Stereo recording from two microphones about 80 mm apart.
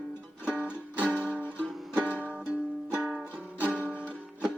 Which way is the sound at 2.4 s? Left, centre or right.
Centre.